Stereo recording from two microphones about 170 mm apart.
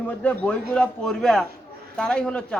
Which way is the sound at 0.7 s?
5° left (ahead or behind).